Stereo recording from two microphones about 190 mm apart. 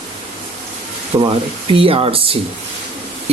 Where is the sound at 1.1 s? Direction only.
20° right (ahead or behind).